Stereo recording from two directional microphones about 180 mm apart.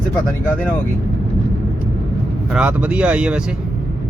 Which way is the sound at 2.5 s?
10° right (ahead or behind).